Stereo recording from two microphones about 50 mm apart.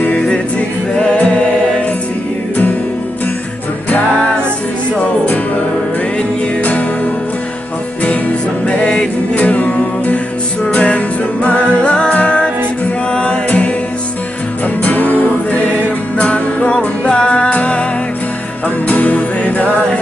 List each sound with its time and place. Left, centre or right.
0.0 s music: left
8.0 s music: left
14.8 s music: left
18.9 s music: left